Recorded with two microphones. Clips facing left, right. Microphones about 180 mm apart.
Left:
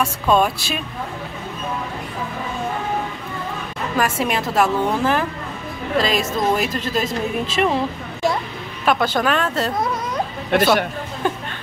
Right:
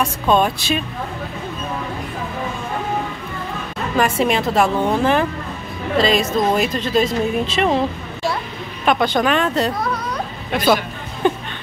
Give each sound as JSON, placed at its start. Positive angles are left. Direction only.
{"t": 0.0, "sound": "speech", "side_deg": 5}
{"t": 3.9, "sound": "speech", "side_deg": 5}
{"t": 8.8, "sound": "speech", "side_deg": 5}
{"t": 10.5, "sound": "a man's voice", "side_deg": 65}